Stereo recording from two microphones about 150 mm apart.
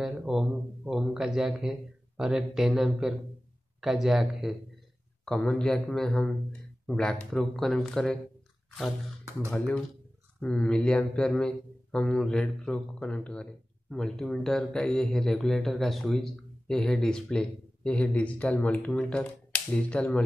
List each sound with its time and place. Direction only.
0.0 s a man's voice: 5° right (ahead or behind)
9.5 s a man's voice: 5° left (ahead or behind)